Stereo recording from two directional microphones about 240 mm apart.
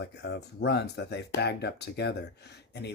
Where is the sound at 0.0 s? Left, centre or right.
Left.